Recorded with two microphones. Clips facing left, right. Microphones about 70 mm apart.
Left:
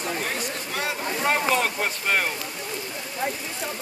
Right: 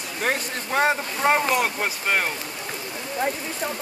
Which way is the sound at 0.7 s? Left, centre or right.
Right.